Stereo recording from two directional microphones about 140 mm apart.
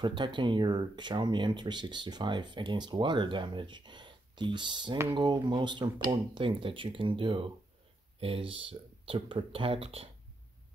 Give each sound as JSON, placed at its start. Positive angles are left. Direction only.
{"t": 0.0, "sound": "speech", "side_deg": -35}